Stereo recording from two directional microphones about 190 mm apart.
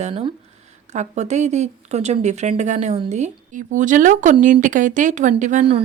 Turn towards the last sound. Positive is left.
turn(degrees=-35)  # may be behind; listen again after turning